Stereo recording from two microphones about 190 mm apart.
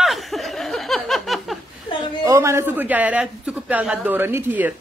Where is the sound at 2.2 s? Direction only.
15° right (ahead or behind).